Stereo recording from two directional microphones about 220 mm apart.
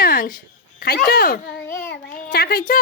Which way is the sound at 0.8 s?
45° left (ahead or behind).